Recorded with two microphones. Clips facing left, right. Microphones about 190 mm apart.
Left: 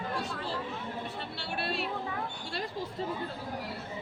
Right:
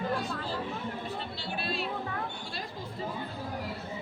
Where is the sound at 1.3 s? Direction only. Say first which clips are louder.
Left 3 dB; 70° left (ahead or behind).